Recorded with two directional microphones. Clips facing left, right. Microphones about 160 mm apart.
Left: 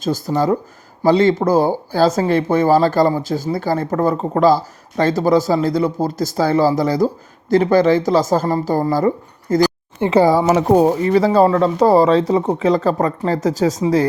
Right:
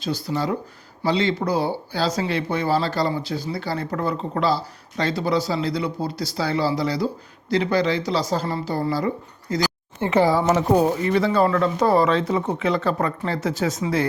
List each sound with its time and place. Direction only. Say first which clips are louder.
0.0 s speech: left 7 dB; 45° left (ahead or behind)
10.0 s speech: left 6 dB; 15° left (ahead or behind)
10.8 s speech: left 6 dB; 35° left (ahead or behind)